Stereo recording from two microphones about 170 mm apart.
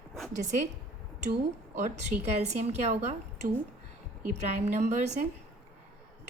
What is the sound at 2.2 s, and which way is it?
A woman's voice, 40° right (ahead or behind).